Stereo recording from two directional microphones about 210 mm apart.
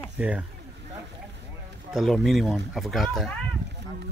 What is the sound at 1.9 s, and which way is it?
Speech, centre (ahead or behind).